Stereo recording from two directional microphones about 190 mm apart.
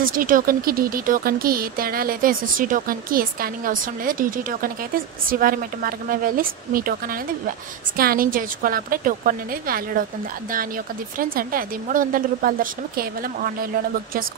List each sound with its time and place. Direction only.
0.0 s speech: 45° right (ahead or behind)
11.1 s speech: 50° right (ahead or behind)